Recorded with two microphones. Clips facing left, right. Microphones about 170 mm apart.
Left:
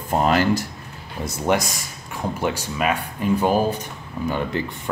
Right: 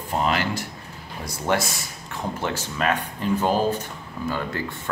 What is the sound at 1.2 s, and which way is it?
Speech, 20° left (ahead or behind).